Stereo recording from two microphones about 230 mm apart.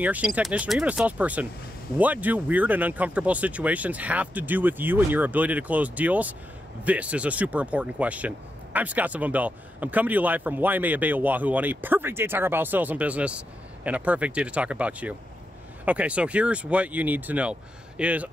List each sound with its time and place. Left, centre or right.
0.0 s speech: centre